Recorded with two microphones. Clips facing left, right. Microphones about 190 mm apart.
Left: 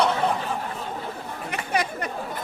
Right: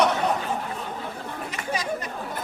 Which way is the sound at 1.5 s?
60° left (ahead or behind).